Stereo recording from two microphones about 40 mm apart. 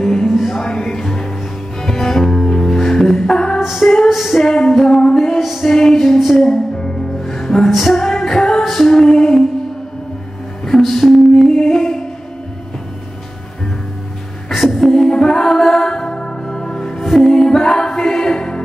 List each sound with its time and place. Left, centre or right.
0.0 s music: centre
4.8 s music: centre
5.4 s music: centre
5.7 s music: centre
6.1 s music: centre
7.2 s music: centre
10.6 s a sound: centre
11.3 s music: centre
14.5 s music: centre
15.0 s music: centre
16.9 s music: centre
17.3 s music: centre